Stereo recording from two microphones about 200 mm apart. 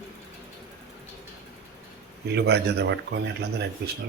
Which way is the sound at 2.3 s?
55° right (ahead or behind).